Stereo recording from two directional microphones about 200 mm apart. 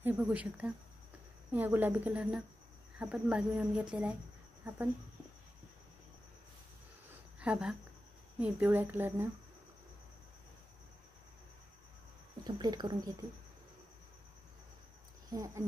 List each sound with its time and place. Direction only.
0.0 s a woman's voice: 10° right (ahead or behind)
7.3 s a woman's voice: 5° right (ahead or behind)
12.4 s speech: 20° right (ahead or behind)
15.3 s a woman's voice: 15° right (ahead or behind)